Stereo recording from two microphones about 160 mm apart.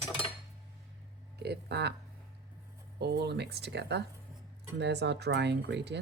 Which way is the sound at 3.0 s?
90° right.